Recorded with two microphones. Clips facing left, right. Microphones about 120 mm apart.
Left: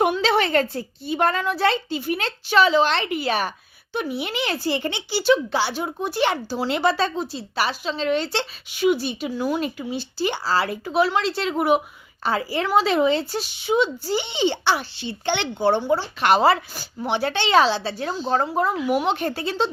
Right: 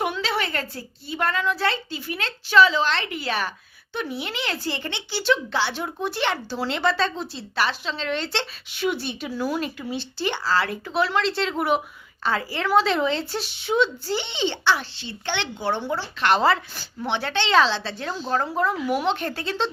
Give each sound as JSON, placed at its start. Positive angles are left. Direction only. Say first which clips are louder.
{"t": 0.0, "sound": "a woman's voice", "louder": "left 6 dB", "side_deg": 25}